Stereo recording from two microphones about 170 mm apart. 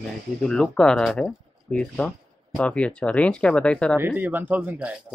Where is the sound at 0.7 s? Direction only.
5° left (ahead or behind).